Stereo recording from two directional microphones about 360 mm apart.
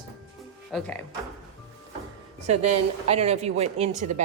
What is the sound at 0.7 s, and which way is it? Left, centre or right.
Speech, centre.